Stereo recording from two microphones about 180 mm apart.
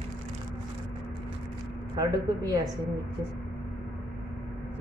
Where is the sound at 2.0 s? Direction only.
20° right (ahead or behind).